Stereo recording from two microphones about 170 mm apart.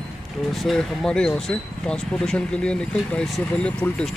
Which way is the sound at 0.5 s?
Centre (ahead or behind).